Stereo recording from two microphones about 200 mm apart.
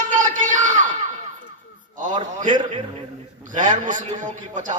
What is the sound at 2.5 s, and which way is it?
Speech, 25° right (ahead or behind).